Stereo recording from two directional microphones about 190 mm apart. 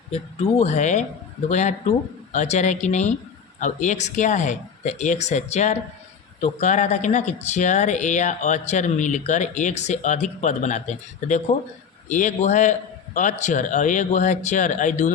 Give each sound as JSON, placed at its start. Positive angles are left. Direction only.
{"t": 0.6, "sound": "speech", "side_deg": 40}